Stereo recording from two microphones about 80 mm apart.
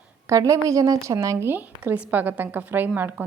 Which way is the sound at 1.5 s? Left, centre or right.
Right.